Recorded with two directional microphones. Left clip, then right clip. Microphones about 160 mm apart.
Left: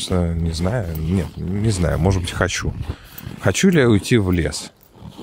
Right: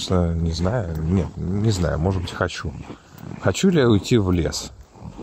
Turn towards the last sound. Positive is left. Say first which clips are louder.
# left 1 dB
turn(degrees=15)  # may be behind; listen again after turning